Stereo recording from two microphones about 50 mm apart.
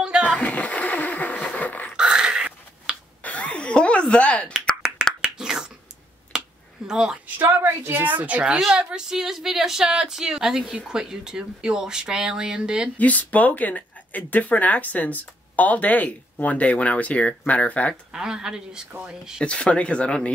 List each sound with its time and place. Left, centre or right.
0.0 s music: centre
0.4 s a sound: left
2.0 s a sound: centre
3.2 s a sound: left
5.2 s finger snapping: centre
6.9 s a woman's voice: centre
7.3 s a woman's voice: right
8.5 s speech: centre
12.9 s speech: left
18.1 s speech: centre
19.4 s speech: left